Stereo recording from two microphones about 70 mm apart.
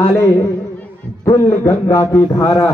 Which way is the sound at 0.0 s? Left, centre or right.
Left.